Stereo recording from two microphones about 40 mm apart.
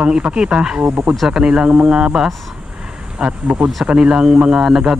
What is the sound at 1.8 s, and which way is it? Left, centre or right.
Speech, centre.